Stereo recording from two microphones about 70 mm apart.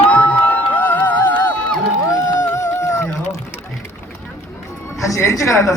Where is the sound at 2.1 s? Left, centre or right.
Left.